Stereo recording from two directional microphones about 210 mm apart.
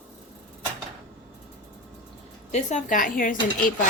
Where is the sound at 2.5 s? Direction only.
35° left (ahead or behind).